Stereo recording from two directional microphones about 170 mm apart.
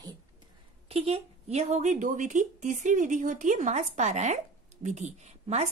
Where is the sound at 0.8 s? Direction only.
35° right (ahead or behind).